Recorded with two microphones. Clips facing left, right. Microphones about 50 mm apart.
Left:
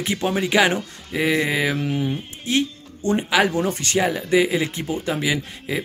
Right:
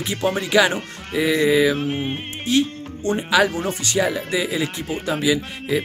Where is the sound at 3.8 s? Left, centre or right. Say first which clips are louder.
Even; left.